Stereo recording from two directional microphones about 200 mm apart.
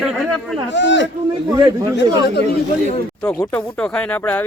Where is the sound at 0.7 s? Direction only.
60° left (ahead or behind).